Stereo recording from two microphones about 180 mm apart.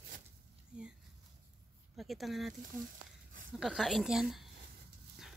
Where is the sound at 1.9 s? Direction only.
Centre (ahead or behind).